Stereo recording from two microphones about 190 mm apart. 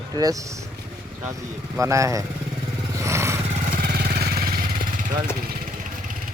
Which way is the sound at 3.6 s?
50° right (ahead or behind).